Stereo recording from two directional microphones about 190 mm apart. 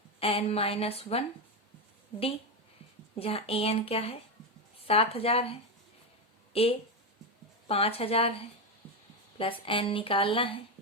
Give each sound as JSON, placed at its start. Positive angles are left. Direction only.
{"t": 0.2, "sound": "a woman's voice", "side_deg": 30}
{"t": 3.2, "sound": "a woman's voice", "side_deg": 30}
{"t": 9.4, "sound": "speech", "side_deg": 25}